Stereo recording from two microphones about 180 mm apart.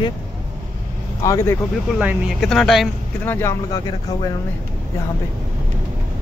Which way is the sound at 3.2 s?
15° left (ahead or behind).